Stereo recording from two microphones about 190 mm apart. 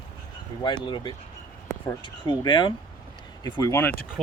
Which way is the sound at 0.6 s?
25° left (ahead or behind).